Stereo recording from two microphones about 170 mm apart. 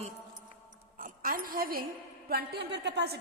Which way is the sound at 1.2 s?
55° right (ahead or behind).